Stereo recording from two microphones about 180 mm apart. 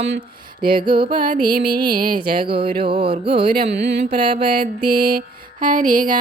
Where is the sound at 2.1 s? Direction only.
30° right (ahead or behind).